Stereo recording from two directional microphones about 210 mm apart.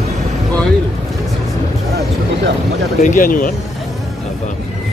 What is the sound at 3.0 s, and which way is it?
Speech, 40° left (ahead or behind).